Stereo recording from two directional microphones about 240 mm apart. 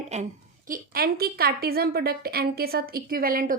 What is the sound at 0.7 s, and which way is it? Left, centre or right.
A woman's voice, right.